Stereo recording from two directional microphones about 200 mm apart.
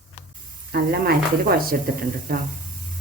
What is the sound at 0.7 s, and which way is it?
Speech, 50° right (ahead or behind).